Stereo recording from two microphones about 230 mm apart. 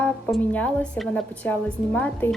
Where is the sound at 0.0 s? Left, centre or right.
Centre.